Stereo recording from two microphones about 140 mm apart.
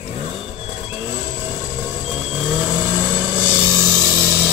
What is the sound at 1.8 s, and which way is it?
Vehicle, 5° right (ahead or behind).